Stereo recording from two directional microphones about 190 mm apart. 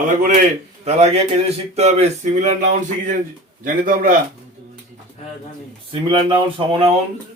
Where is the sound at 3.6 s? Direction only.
45° right (ahead or behind).